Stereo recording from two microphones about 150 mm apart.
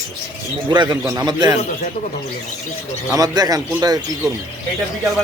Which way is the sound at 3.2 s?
25° right (ahead or behind).